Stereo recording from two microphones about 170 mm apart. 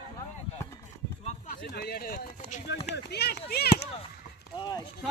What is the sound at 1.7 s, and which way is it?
Speech, 65° left (ahead or behind).